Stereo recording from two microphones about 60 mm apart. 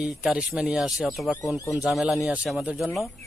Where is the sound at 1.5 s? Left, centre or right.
Left.